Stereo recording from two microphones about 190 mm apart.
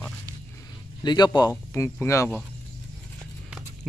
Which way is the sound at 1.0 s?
20° left (ahead or behind).